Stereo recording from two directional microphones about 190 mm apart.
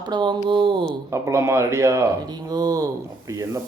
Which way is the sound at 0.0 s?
25° right (ahead or behind).